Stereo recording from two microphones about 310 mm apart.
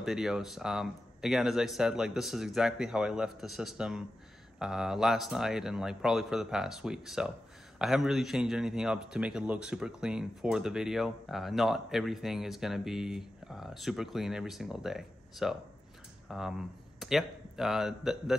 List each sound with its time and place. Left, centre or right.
0.0 s speech: centre